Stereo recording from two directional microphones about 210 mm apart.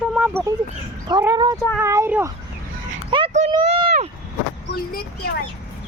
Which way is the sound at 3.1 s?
25° right (ahead or behind).